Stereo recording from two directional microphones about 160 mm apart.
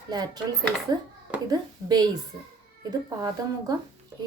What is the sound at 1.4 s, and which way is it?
Speech, 25° right (ahead or behind).